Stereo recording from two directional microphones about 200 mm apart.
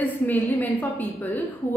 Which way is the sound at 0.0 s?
10° left (ahead or behind).